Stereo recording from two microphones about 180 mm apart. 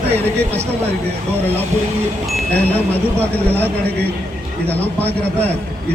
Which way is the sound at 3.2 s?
10° left (ahead or behind).